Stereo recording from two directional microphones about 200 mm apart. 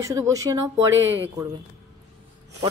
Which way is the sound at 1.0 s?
70° right (ahead or behind).